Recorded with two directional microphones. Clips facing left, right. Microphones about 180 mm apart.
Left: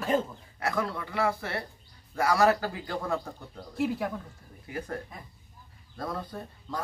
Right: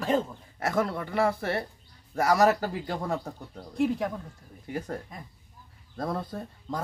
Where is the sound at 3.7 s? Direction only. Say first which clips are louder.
Right 3 dB; 5° left (ahead or behind).